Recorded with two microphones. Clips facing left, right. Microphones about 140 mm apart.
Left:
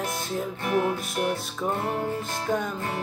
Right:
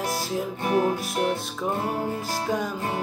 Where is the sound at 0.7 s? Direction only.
35° right (ahead or behind).